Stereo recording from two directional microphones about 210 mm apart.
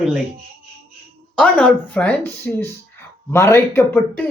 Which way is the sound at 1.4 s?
5° left (ahead or behind).